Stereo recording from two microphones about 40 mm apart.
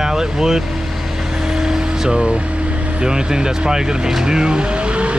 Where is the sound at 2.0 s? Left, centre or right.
Centre.